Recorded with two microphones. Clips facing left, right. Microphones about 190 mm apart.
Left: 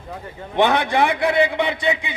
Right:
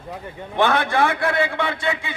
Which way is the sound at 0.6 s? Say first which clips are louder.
Left 1 dB; 15° left (ahead or behind).